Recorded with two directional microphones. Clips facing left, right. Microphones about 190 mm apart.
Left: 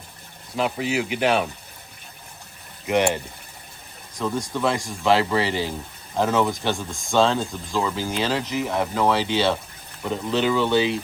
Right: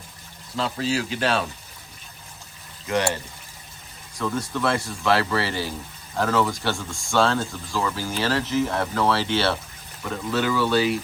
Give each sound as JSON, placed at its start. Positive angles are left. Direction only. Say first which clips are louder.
{"t": 0.5, "sound": "speech", "louder": "left 1 dB", "side_deg": 15}
{"t": 2.8, "sound": "speech", "louder": "left 3 dB", "side_deg": 20}